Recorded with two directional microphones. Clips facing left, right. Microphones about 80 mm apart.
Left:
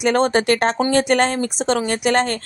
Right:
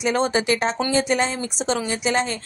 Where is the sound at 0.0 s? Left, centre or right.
Left.